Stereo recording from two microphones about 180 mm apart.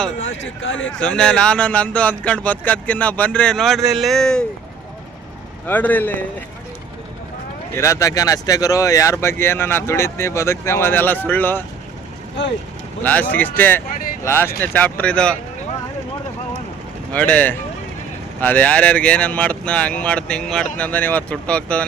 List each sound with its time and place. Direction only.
0.2 s speech: 90° left
0.9 s a man's voice: 5° left (ahead or behind)
5.6 s speech: 10° left (ahead or behind)
7.8 s speech: 15° left (ahead or behind)
13.0 s speech: 10° left (ahead or behind)
17.1 s speech: 5° left (ahead or behind)